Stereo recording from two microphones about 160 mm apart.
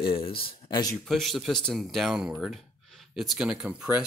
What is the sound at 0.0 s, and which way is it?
Speech, 35° left (ahead or behind).